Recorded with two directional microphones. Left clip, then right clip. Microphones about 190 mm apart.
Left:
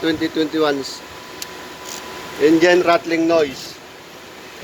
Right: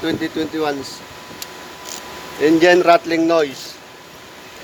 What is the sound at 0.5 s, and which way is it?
Speech, centre (ahead or behind).